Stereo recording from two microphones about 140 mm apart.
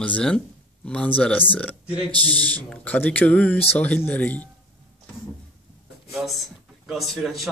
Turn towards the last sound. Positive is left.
turn(degrees=0)  # may be behind; listen again after turning